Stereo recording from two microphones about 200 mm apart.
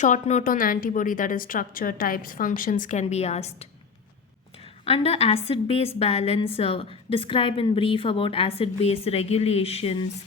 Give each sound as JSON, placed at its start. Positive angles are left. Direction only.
{"t": 0.0, "sound": "a woman's voice", "side_deg": 35}